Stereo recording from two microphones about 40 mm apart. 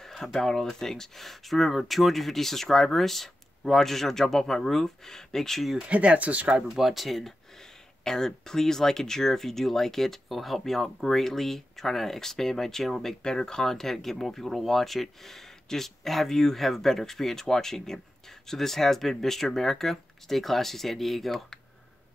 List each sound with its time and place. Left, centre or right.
0.0 s speech: centre
5.9 s speech: right
6.7 s speech: centre
8.0 s speech: centre